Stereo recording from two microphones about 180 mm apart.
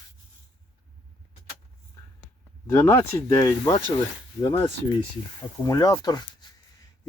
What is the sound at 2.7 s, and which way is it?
Speech, 15° left (ahead or behind).